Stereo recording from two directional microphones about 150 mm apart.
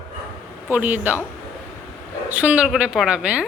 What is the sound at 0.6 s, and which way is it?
Speech, 10° right (ahead or behind).